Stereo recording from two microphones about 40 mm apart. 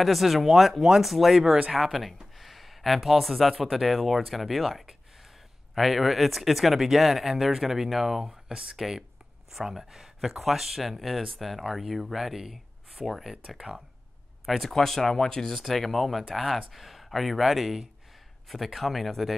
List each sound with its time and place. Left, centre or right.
0.0 s speech: centre
13.6 s speech: centre
14.4 s speech: centre